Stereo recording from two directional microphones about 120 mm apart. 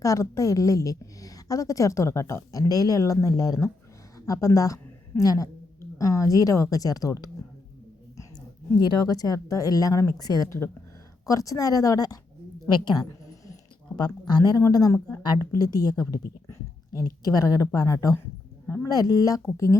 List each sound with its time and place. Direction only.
0.0 s a woman's voice: 25° left (ahead or behind)
8.7 s a woman's voice: 35° left (ahead or behind)